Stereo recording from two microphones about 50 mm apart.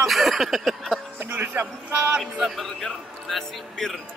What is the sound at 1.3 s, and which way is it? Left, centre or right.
Speech, right.